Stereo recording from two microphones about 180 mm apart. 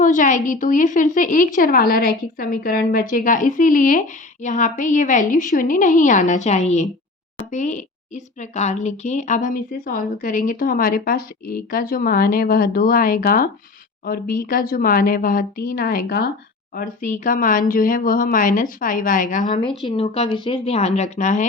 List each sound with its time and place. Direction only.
0.0 s a woman's voice: 45° left (ahead or behind)
19.8 s speech: 30° left (ahead or behind)